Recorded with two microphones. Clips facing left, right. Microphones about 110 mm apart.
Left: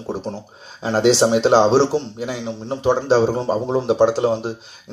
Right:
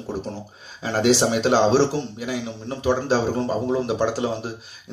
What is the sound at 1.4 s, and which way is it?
Speech, 20° left (ahead or behind).